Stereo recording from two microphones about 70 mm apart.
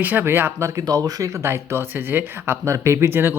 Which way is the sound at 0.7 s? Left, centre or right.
Right.